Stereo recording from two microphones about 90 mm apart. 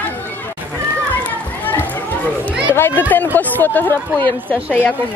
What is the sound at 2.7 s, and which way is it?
Speech, 25° left (ahead or behind).